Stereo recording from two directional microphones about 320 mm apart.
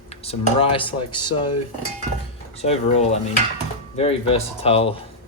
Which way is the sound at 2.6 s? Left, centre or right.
Centre.